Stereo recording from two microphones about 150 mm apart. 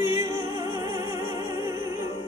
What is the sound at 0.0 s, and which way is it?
Music, 20° right (ahead or behind).